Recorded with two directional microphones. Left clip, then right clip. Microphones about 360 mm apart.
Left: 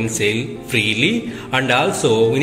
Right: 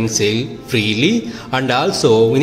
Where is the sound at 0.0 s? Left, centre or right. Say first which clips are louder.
Right 2 dB; centre.